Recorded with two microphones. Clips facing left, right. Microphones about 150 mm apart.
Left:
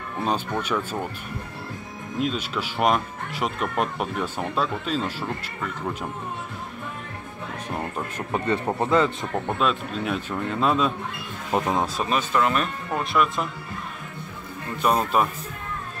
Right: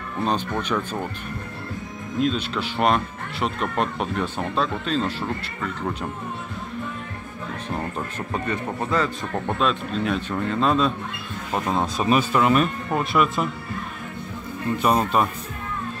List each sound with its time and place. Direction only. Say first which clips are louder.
0.2 s speech: right 1 dB; 10° left (ahead or behind)
2.1 s speech: right 3 dB; 10° left (ahead or behind)
8.3 s speech: left 4 dB; 25° left (ahead or behind)
9.5 s speech: right 2 dB; 5° left (ahead or behind)
12.0 s speech: right 6 dB; 10° right (ahead or behind)
14.8 s speech: even; centre (ahead or behind)